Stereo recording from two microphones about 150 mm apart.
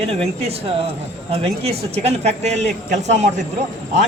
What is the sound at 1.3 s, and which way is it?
A man's voice, 45° right (ahead or behind).